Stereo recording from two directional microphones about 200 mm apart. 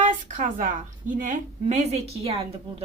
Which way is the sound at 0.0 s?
40° right (ahead or behind).